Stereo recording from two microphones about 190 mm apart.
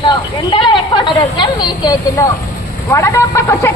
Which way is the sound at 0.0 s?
25° left (ahead or behind).